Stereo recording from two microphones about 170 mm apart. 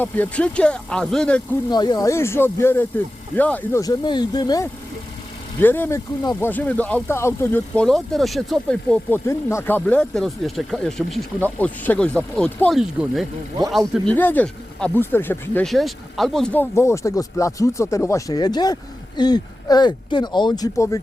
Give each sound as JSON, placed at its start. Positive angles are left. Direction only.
{"t": 0.0, "sound": "speech", "side_deg": 10}
{"t": 1.7, "sound": "speech", "side_deg": 25}
{"t": 5.5, "sound": "speech", "side_deg": 10}
{"t": 15.6, "sound": "speech", "side_deg": 0}